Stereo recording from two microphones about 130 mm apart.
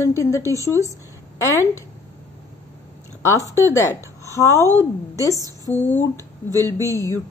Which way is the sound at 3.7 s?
20° left (ahead or behind).